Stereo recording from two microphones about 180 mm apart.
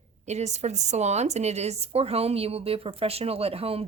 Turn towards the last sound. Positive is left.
turn(degrees=-35)  # may be behind; listen again after turning